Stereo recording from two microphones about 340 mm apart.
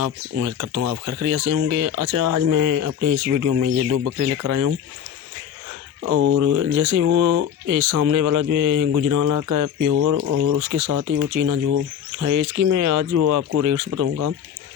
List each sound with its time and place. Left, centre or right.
0.0 s speech: right
6.0 s speech: right
6.4 s speech: right
9.9 s speech: right